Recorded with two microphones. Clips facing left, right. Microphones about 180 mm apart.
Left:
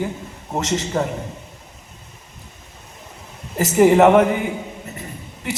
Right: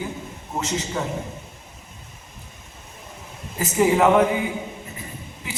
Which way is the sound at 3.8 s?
60° left (ahead or behind).